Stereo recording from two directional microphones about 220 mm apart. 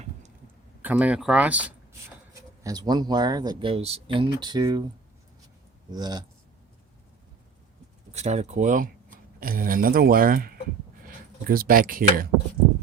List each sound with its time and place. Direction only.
0.8 s speech: 5° right (ahead or behind)
2.6 s speech: 20° right (ahead or behind)
5.9 s speech: 20° right (ahead or behind)
8.1 s speech: 30° right (ahead or behind)